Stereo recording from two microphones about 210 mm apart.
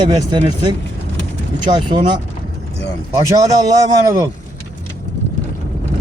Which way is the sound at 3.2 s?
15° right (ahead or behind).